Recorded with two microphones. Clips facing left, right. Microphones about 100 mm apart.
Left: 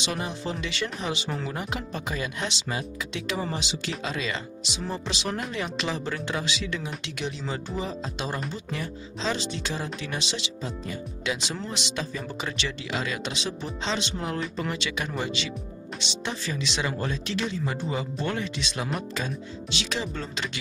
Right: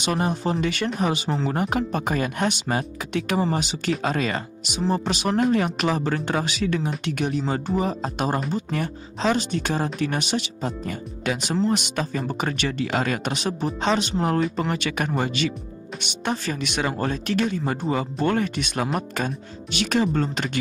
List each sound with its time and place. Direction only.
0.0 s speech: 50° right (ahead or behind)
1.3 s speech: 35° right (ahead or behind)
1.6 s speech: 50° right (ahead or behind)